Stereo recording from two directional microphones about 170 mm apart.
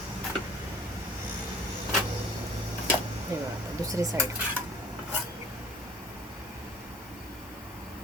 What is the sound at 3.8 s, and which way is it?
Speech, 20° right (ahead or behind).